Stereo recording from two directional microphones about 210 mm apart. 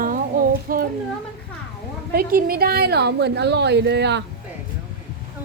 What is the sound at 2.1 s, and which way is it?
A woman's voice, 45° right (ahead or behind).